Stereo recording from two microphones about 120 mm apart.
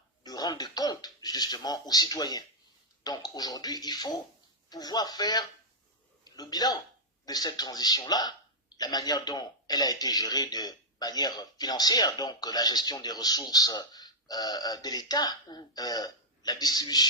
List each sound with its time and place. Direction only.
0.2 s a man's voice: 35° left (ahead or behind)